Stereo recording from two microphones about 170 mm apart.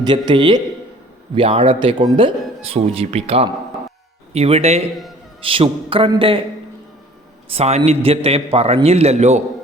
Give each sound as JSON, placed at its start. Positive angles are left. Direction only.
{"t": 0.0, "sound": "a man's voice", "side_deg": -25}
{"t": 7.5, "sound": "speech", "side_deg": -40}